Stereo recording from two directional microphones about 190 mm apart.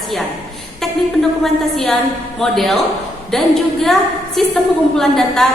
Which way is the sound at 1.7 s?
Centre (ahead or behind).